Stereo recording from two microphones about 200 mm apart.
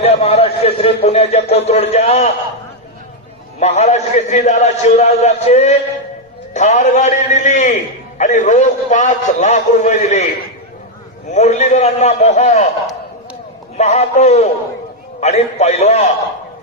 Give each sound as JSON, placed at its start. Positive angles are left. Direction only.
{"t": 0.0, "sound": "a man's voice", "side_deg": 30}
{"t": 3.6, "sound": "a man's voice", "side_deg": 35}
{"t": 11.3, "sound": "a man's voice", "side_deg": 35}
{"t": 13.7, "sound": "a man's voice", "side_deg": 35}